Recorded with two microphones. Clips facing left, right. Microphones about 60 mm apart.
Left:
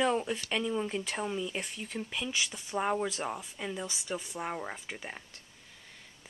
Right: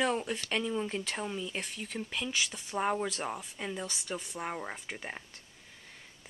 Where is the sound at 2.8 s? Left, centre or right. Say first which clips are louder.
Even; centre.